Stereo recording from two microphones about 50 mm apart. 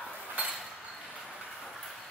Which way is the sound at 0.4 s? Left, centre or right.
Right.